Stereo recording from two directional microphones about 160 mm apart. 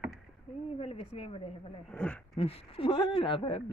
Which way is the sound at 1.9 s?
5° left (ahead or behind).